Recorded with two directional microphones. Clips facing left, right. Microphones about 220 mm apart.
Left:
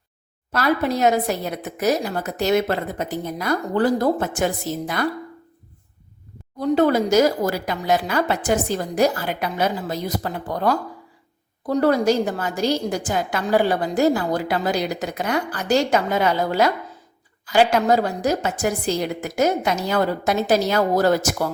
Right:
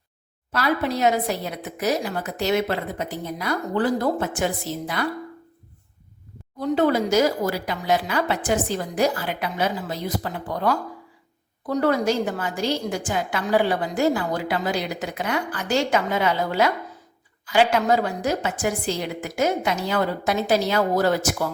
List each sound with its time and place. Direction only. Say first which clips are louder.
0.5 s a woman's voice: left 3 dB; 45° left (ahead or behind)
6.6 s a woman's voice: left 3 dB; 40° left (ahead or behind)
11.6 s a woman's voice: left 3 dB; 35° left (ahead or behind)